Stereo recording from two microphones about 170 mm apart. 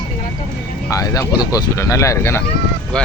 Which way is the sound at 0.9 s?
20° left (ahead or behind).